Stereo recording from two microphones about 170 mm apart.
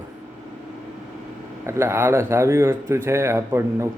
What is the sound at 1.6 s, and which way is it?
Speech, 15° right (ahead or behind).